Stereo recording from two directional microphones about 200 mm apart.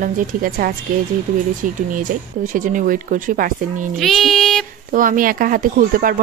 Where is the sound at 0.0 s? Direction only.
40° right (ahead or behind).